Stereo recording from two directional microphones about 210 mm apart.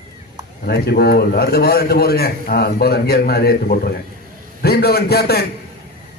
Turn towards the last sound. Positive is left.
turn(degrees=50)  # may be behind; listen again after turning